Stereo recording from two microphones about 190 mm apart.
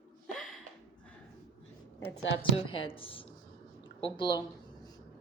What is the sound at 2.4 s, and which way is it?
A woman's voice, 30° left (ahead or behind).